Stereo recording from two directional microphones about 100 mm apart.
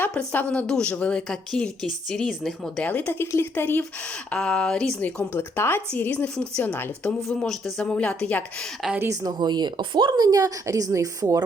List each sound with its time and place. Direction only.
0.1 s a woman's voice: 10° left (ahead or behind)
2.8 s speech: 15° left (ahead or behind)
4.3 s a woman's voice: 10° left (ahead or behind)
6.6 s speech: 20° left (ahead or behind)
7.2 s a woman's voice: 5° left (ahead or behind)
9.0 s speech: 40° right (ahead or behind)